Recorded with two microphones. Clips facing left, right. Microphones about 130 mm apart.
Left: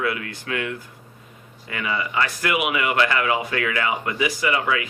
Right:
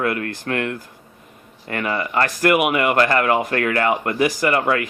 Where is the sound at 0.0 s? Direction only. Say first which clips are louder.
Right 4 dB; 50° right (ahead or behind).